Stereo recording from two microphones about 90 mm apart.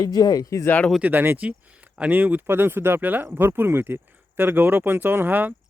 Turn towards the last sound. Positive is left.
turn(degrees=-20)  # may be behind; listen again after turning